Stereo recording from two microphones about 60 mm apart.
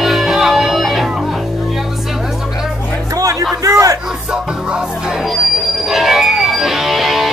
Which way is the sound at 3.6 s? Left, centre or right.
Right.